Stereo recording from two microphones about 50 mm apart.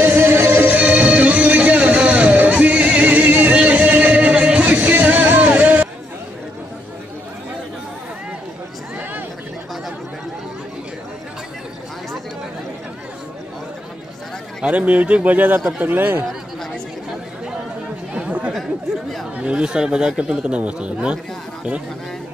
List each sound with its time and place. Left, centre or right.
0.0 s music: right
0.7 s music: right
14.6 s speech: right
15.3 s speech: right
18.1 s chatter: right
19.3 s speech: right